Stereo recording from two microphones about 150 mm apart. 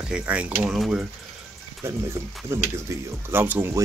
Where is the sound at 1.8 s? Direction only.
15° right (ahead or behind).